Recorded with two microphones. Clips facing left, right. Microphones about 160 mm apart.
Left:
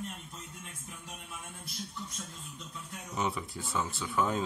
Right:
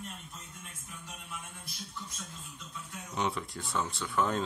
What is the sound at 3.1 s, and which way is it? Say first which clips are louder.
Speech: even; 5° left (ahead or behind).